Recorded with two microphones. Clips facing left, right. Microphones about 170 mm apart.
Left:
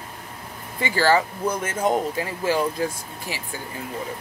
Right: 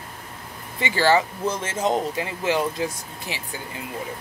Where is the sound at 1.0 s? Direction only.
25° right (ahead or behind).